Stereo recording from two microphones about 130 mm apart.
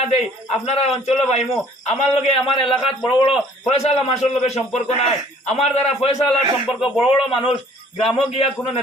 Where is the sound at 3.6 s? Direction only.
55° left (ahead or behind).